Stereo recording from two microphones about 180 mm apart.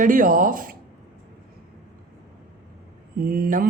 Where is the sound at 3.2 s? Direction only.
55° right (ahead or behind).